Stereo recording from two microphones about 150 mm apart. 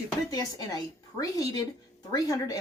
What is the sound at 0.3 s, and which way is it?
Speech, 25° left (ahead or behind).